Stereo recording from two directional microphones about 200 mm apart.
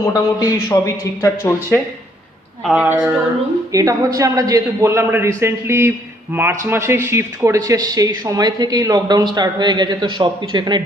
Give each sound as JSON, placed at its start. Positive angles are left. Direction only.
{"t": 0.0, "sound": "speech", "side_deg": 15}
{"t": 2.6, "sound": "speech", "side_deg": -5}
{"t": 3.7, "sound": "a man's voice", "side_deg": -15}